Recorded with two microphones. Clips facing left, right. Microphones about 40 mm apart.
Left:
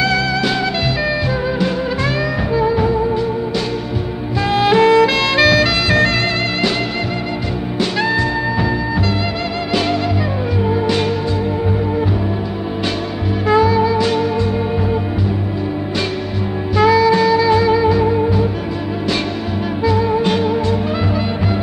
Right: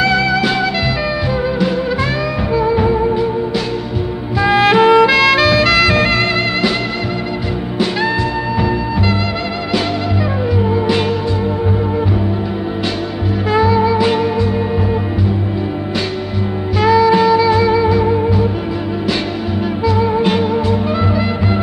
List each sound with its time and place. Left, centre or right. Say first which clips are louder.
0.0 s music: right 3 dB; centre
2.7 s music: right 2 dB; centre
4.4 s music: right 2 dB; centre
5.1 s music: right 2 dB; centre
13.5 s music: even; centre
16.7 s music: right 1 dB; centre
20.0 s music: right 3 dB; centre